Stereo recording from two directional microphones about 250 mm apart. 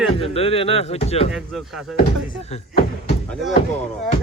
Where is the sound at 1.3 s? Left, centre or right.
Centre.